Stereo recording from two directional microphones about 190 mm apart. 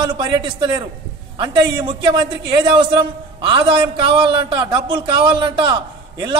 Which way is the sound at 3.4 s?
25° right (ahead or behind).